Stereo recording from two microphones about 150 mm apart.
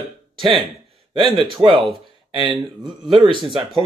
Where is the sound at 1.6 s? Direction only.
35° right (ahead or behind).